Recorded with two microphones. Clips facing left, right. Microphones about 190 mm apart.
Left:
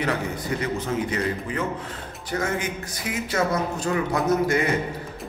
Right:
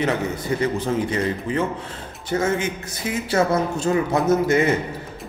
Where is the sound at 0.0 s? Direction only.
25° right (ahead or behind).